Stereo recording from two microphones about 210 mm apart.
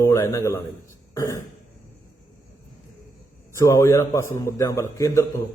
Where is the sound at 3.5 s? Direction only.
15° left (ahead or behind).